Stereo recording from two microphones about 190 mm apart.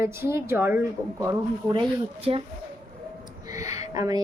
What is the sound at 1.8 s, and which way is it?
Speech, 30° right (ahead or behind).